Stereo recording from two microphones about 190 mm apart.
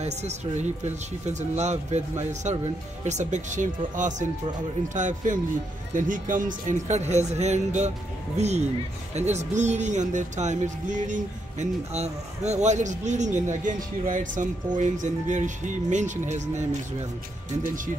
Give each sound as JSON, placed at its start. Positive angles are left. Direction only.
{"t": 0.0, "sound": "speech", "side_deg": -35}